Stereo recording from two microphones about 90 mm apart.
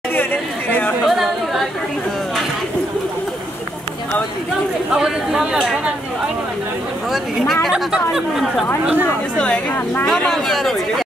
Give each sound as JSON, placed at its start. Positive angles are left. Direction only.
{"t": 0.1, "sound": "chatter", "side_deg": 25}
{"t": 1.0, "sound": "chatter", "side_deg": 0}
{"t": 4.9, "sound": "speech", "side_deg": -10}
{"t": 7.1, "sound": "speech", "side_deg": 0}
{"t": 10.0, "sound": "speech", "side_deg": 5}